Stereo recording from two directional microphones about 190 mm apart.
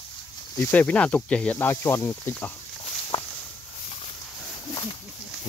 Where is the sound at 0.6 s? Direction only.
10° left (ahead or behind).